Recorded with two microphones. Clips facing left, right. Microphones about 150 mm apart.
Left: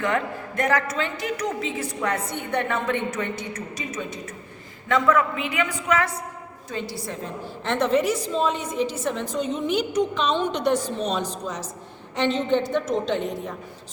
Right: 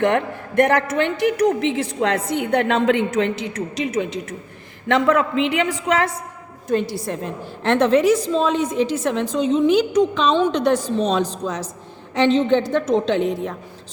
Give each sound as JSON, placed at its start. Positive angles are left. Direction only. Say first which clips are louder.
{"t": 0.0, "sound": "a woman's voice", "louder": "right 6 dB", "side_deg": -65}
{"t": 4.9, "sound": "a woman's voice", "louder": "right 3 dB", "side_deg": -75}
{"t": 6.7, "sound": "a woman's voice", "louder": "right 10 dB", "side_deg": -60}
{"t": 7.6, "sound": "a woman's voice", "louder": "right 6 dB", "side_deg": -75}